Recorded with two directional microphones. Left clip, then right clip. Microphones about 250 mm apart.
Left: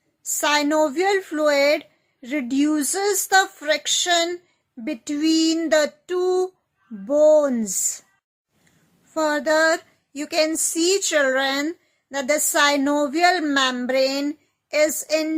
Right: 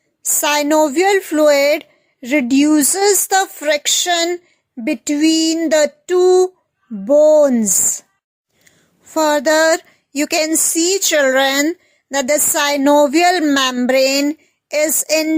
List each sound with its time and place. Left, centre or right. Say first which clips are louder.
0.3 s speech: right 5 dB; right
9.1 s speech: right 6 dB; right